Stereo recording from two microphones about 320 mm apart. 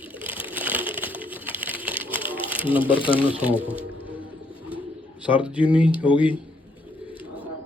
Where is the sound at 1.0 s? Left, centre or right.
Centre.